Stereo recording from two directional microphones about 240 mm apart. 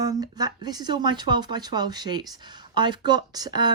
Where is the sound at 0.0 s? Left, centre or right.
Centre.